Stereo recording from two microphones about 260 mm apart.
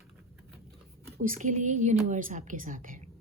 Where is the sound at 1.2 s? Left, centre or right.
Right.